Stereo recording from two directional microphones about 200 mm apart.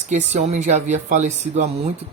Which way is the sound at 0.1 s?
35° right (ahead or behind).